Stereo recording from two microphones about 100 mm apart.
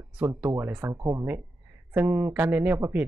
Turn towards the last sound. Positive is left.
turn(degrees=-20)  # may be behind; listen again after turning